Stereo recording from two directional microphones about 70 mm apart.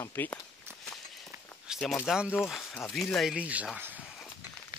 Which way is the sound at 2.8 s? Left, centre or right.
Centre.